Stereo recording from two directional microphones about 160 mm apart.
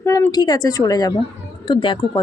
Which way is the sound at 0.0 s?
20° left (ahead or behind).